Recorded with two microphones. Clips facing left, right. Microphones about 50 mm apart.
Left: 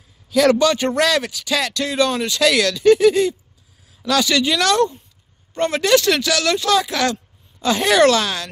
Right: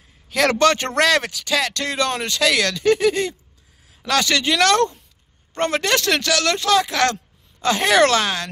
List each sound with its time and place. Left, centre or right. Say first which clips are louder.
0.3 s speech: left 2 dB; right